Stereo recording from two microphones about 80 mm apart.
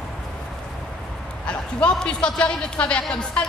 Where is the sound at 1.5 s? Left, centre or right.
Centre.